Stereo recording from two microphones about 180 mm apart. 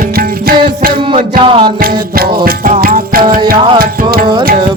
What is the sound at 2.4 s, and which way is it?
Music, 50° right (ahead or behind).